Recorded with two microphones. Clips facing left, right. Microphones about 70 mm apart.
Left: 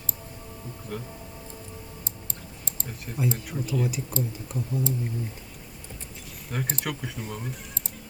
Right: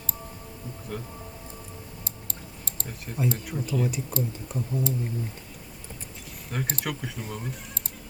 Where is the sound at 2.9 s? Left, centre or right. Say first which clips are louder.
Even; centre.